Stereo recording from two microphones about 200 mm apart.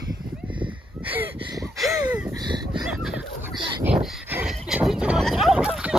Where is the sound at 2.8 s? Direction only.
Centre (ahead or behind).